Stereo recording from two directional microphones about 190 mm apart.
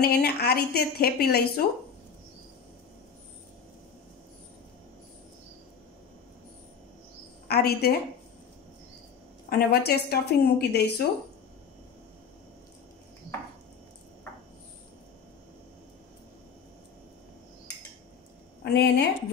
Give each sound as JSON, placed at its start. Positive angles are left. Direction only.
{"t": 0.0, "sound": "speech", "side_deg": 55}
{"t": 7.4, "sound": "speech", "side_deg": 55}
{"t": 9.5, "sound": "speech", "side_deg": 55}
{"t": 18.6, "sound": "a woman's voice", "side_deg": 60}